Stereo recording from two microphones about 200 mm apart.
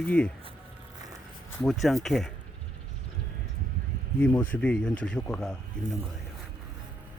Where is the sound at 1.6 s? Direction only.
Centre (ahead or behind).